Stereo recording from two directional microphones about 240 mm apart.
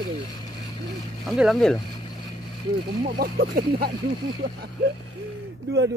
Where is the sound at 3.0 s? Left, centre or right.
Right.